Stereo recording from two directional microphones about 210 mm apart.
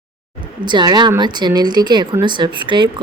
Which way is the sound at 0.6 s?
20° right (ahead or behind).